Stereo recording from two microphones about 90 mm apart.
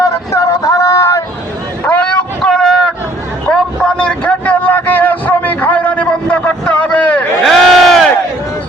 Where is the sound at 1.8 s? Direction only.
15° left (ahead or behind).